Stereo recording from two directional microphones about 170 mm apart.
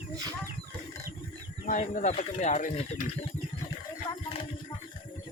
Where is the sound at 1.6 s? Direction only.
50° left (ahead or behind).